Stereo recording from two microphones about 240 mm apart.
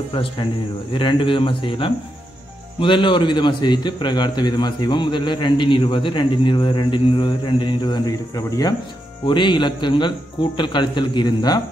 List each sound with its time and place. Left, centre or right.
0.1 s a man's voice: left